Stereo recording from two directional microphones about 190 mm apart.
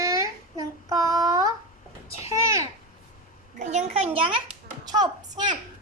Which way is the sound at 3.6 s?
35° right (ahead or behind).